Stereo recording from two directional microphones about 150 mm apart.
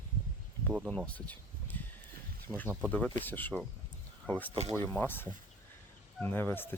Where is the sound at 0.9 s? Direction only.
10° left (ahead or behind).